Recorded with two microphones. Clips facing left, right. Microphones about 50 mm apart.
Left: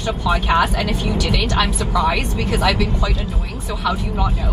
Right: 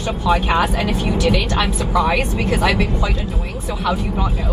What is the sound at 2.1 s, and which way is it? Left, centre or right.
Speech, right.